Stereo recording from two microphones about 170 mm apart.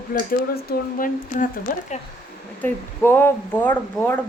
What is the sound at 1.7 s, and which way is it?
Speech, 50° left (ahead or behind).